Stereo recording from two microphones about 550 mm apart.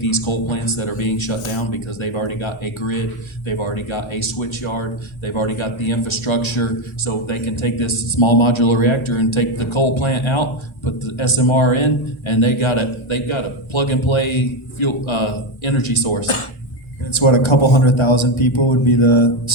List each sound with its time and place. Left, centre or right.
0.0 s speech: left